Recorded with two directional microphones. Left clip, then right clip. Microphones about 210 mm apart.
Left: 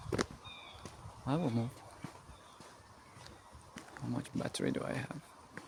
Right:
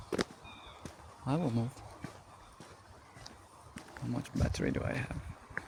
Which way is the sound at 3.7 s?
5° right (ahead or behind).